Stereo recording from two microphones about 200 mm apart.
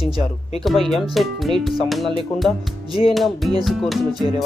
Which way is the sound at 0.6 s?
Centre (ahead or behind).